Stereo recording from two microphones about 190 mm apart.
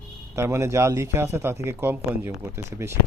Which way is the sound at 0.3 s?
15° right (ahead or behind).